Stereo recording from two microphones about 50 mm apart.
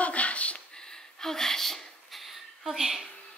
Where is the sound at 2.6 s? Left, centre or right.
Centre.